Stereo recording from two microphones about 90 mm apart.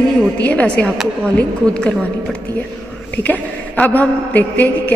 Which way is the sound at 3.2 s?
15° left (ahead or behind).